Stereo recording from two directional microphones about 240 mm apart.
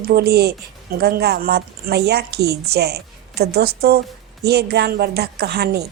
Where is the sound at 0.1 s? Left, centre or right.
Right.